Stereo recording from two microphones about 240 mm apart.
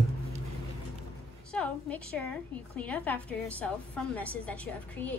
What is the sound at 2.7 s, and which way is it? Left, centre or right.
A woman's voice, centre.